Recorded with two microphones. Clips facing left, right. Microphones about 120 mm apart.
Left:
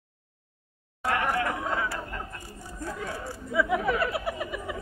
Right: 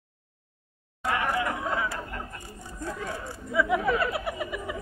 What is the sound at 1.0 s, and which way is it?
Chatter, 20° right (ahead or behind).